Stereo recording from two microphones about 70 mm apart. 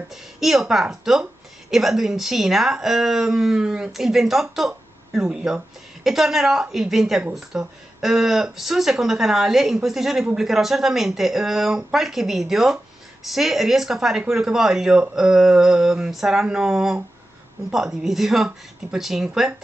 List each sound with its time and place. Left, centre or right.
0.1 s speech: centre